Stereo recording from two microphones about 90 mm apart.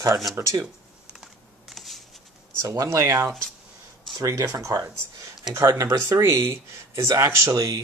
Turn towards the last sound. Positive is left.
turn(degrees=-40)  # may be behind; listen again after turning